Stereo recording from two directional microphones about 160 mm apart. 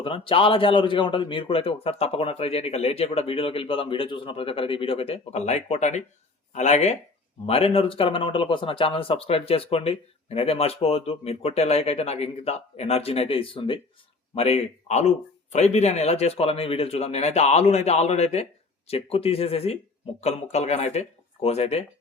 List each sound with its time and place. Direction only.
0.0 s speech: 35° left (ahead or behind)